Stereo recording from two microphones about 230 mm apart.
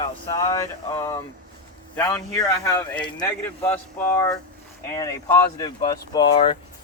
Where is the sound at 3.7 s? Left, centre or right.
Centre.